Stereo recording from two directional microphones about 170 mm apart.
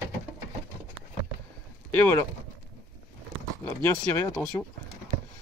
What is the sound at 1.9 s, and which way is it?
Speech, 10° left (ahead or behind).